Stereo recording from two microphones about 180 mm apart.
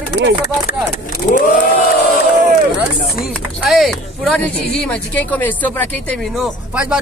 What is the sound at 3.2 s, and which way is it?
Speech, centre (ahead or behind).